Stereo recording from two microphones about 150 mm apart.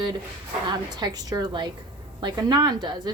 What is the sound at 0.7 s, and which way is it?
A woman's voice, 30° right (ahead or behind).